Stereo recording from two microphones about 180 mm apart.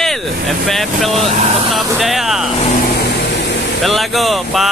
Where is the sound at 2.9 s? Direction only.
70° left (ahead or behind).